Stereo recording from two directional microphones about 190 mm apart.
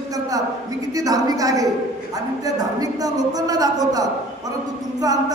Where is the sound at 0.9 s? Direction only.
20° right (ahead or behind).